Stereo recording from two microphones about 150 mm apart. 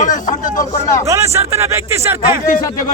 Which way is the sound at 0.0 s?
60° left (ahead or behind).